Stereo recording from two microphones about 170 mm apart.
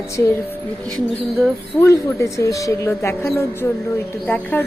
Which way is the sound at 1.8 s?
15° left (ahead or behind).